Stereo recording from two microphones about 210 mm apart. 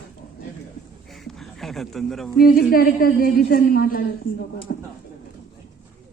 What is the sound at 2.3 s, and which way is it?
A woman's voice, 45° left (ahead or behind).